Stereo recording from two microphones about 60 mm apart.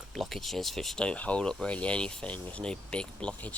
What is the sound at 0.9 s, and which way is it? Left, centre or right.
Speech, centre.